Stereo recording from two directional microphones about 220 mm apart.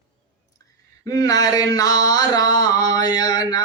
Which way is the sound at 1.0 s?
15° left (ahead or behind).